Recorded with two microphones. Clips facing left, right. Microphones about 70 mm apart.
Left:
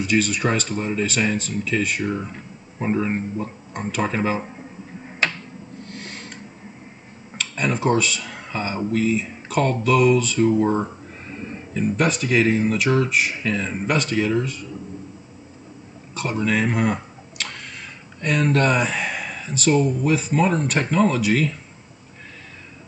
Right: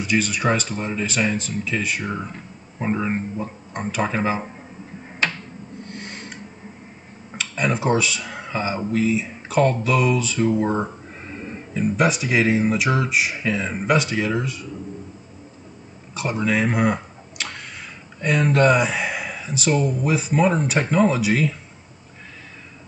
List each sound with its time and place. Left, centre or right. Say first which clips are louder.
0.0 s speech: left 1 dB; centre
5.9 s a sound: even; centre
7.3 s speech: right 1 dB; centre
16.2 s speech: even; centre